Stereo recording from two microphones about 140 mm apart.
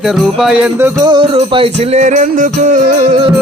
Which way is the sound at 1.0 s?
35° right (ahead or behind).